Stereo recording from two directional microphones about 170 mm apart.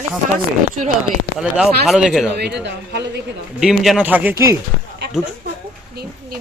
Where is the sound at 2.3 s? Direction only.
80° right.